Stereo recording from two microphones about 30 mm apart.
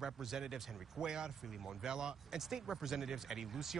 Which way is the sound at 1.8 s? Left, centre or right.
Right.